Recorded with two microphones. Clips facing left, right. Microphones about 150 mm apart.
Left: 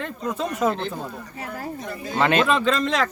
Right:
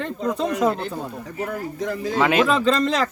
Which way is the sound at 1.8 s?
90° right.